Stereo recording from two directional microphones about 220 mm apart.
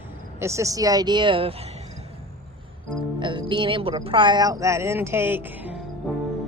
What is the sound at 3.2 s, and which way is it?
Speech, 20° right (ahead or behind).